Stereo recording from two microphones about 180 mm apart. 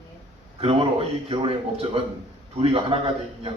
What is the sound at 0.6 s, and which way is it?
A man's voice, 35° right (ahead or behind).